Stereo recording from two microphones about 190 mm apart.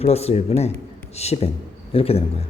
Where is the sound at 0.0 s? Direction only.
35° left (ahead or behind).